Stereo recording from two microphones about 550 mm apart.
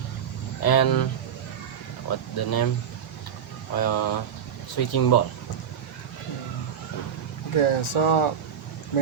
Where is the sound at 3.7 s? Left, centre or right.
Left.